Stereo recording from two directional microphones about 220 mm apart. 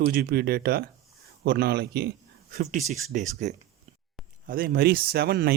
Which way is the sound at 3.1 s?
35° right (ahead or behind).